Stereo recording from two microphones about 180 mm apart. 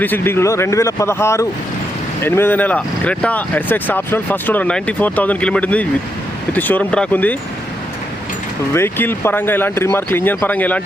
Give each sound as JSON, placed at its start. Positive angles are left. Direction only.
{"t": 0.0, "sound": "speech", "side_deg": 10}
{"t": 8.7, "sound": "speech", "side_deg": 10}